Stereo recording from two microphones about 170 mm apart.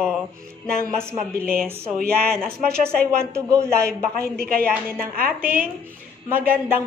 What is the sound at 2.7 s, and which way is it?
Speech, 5° left (ahead or behind).